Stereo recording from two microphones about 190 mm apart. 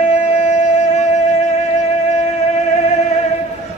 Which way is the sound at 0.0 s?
40° left (ahead or behind).